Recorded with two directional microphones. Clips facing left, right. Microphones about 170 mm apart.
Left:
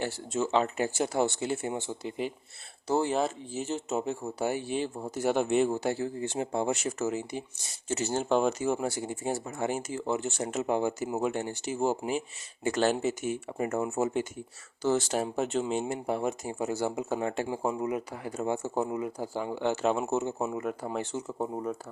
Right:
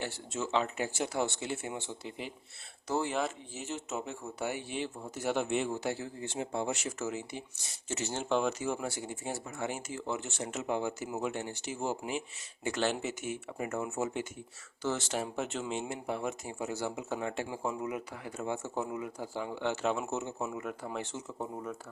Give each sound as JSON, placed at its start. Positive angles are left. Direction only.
{"t": 0.0, "sound": "speech", "side_deg": 40}
{"t": 2.8, "sound": "speech", "side_deg": 30}